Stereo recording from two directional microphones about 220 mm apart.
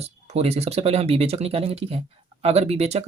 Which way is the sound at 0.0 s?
30° right (ahead or behind).